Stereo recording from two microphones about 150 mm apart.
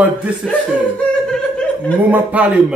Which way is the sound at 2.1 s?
10° right (ahead or behind).